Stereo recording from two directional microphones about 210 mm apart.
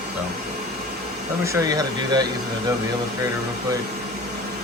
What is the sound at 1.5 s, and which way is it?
Speech, 15° right (ahead or behind).